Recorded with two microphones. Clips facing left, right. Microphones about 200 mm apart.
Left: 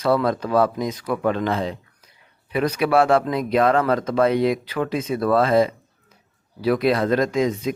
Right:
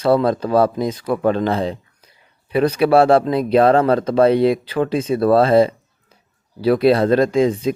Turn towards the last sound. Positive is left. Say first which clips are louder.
# right 5 dB
turn(degrees=-30)  # may be behind; listen again after turning